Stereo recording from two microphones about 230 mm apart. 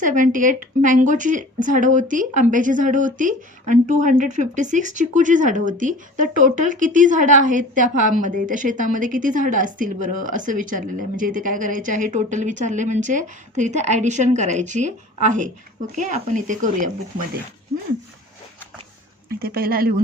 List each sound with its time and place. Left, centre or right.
0.0 s speech: right
19.4 s speech: right